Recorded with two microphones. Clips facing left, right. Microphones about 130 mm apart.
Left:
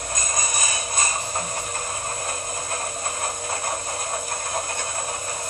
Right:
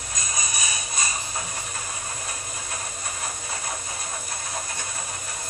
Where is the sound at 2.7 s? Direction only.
50° left (ahead or behind).